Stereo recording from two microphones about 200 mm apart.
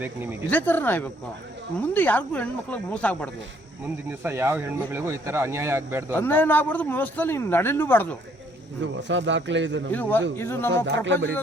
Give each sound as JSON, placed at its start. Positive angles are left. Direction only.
{"t": 0.0, "sound": "speech", "side_deg": -10}
{"t": 0.5, "sound": "speech", "side_deg": 10}
{"t": 4.2, "sound": "speech", "side_deg": -10}
{"t": 6.1, "sound": "speech", "side_deg": 10}
{"t": 8.8, "sound": "a man's voice", "side_deg": -65}
{"t": 9.9, "sound": "speech", "side_deg": 10}
{"t": 10.8, "sound": "a man's voice", "side_deg": -65}